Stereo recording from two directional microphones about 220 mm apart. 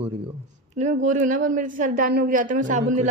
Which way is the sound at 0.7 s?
35° right (ahead or behind).